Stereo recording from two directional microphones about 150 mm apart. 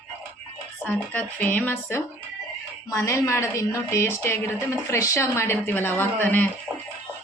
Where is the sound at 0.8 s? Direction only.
10° left (ahead or behind).